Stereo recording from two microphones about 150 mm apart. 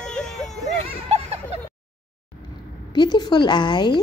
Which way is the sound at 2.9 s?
30° left (ahead or behind).